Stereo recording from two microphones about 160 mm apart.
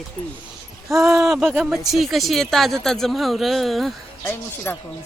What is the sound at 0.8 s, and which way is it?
Speech, 20° right (ahead or behind).